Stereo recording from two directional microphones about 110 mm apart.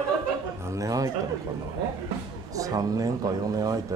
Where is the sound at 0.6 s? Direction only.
30° right (ahead or behind).